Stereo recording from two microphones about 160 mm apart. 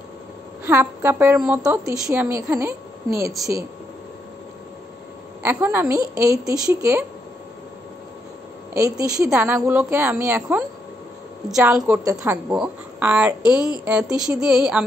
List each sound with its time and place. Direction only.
0.7 s a woman's voice: 15° right (ahead or behind)
5.4 s a woman's voice: 15° right (ahead or behind)
8.7 s a woman's voice: 20° right (ahead or behind)
9.3 s a woman's voice: 5° right (ahead or behind)
9.6 s a woman's voice: 15° right (ahead or behind)
11.4 s a woman's voice: 5° right (ahead or behind)